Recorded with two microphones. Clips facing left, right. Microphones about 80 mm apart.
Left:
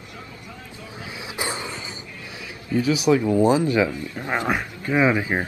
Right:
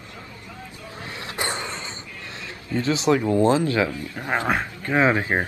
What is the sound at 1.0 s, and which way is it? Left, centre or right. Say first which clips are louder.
Cough: right 1 dB; centre.